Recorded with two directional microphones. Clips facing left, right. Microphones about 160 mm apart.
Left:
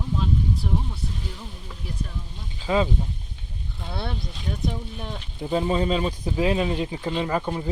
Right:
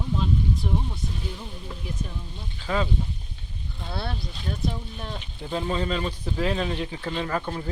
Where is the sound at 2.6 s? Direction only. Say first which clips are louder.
Left 4 dB; 15° left (ahead or behind).